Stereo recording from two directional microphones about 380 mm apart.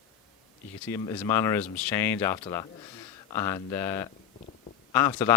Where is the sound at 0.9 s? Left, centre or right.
Centre.